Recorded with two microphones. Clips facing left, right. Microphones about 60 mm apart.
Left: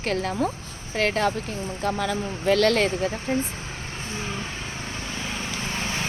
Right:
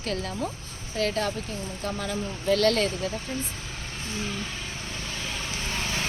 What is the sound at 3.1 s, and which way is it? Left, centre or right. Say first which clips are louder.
Speech: left 6 dB; left.